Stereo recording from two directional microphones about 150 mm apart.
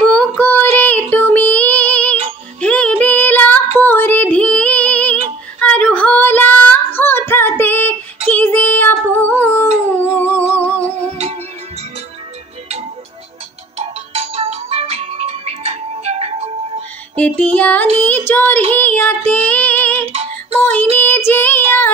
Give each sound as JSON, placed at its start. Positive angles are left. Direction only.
{"t": 0.4, "sound": "child singing", "side_deg": 10}
{"t": 3.7, "sound": "female singing", "side_deg": 15}
{"t": 8.3, "sound": "child singing", "side_deg": 10}
{"t": 9.8, "sound": "humming", "side_deg": 15}
{"t": 13.7, "sound": "music", "side_deg": -40}
{"t": 17.1, "sound": "music", "side_deg": 10}
{"t": 18.0, "sound": "child singing", "side_deg": 10}
{"t": 20.1, "sound": "music", "side_deg": -45}
{"t": 20.6, "sound": "child singing", "side_deg": 10}